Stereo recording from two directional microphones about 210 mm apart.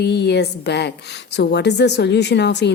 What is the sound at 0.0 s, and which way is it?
A woman's voice, 50° left (ahead or behind).